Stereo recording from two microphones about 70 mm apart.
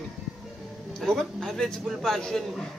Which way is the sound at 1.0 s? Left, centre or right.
Centre.